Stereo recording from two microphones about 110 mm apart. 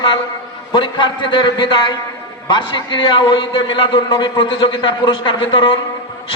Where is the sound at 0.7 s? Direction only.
50° left (ahead or behind).